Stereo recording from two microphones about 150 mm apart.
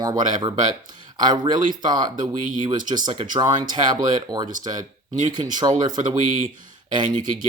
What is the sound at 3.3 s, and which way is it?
Speech, 30° right (ahead or behind).